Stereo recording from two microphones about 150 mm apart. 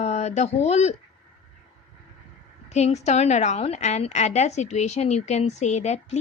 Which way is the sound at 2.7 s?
45° left (ahead or behind).